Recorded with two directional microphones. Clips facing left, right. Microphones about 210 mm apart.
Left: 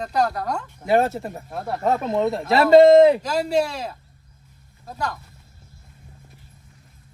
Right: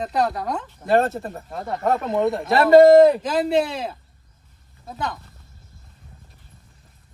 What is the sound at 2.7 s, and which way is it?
Speech, 20° left (ahead or behind).